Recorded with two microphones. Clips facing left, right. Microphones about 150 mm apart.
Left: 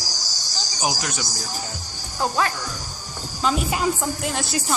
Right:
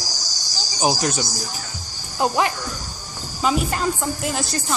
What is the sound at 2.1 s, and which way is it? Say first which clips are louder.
Speech: right 3 dB; 20° right (ahead or behind).